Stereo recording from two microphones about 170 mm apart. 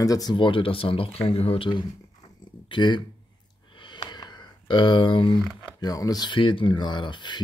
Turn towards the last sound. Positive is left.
turn(degrees=25)  # may be behind; listen again after turning